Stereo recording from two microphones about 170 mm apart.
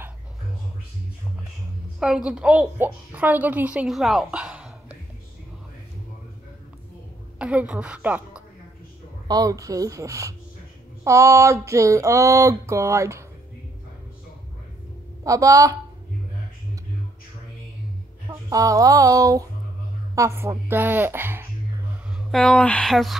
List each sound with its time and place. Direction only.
2.0 s a woman's voice: 5° right (ahead or behind)
7.3 s a woman's voice: 5° right (ahead or behind)
9.3 s a woman's voice: 20° right (ahead or behind)
15.2 s speech: 20° right (ahead or behind)
18.3 s a woman's voice: 20° right (ahead or behind)
22.3 s speech: 5° left (ahead or behind)